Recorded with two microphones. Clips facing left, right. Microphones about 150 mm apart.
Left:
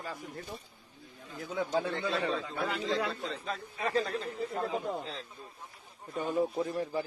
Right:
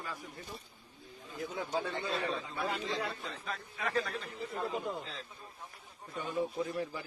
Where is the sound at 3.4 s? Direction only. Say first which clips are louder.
Left 1 dB; 30° left (ahead or behind).